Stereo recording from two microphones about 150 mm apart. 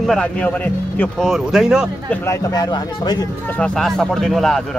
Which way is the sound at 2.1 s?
20° left (ahead or behind).